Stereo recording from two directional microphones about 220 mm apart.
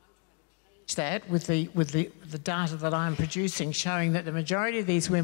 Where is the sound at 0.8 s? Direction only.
10° left (ahead or behind).